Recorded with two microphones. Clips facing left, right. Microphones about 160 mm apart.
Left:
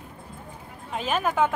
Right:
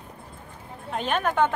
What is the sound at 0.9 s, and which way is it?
Speech, 5° left (ahead or behind).